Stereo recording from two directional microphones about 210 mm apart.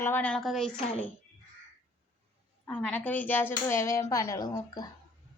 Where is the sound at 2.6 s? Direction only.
5° left (ahead or behind).